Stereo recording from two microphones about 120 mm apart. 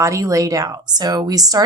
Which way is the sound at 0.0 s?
25° right (ahead or behind).